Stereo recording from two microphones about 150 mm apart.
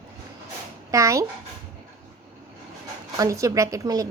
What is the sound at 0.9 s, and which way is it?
Speech, 20° right (ahead or behind).